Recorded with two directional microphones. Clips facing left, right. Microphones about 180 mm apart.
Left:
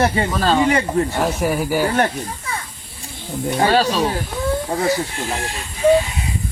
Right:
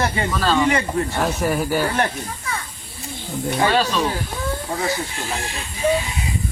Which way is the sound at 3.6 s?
40° left (ahead or behind).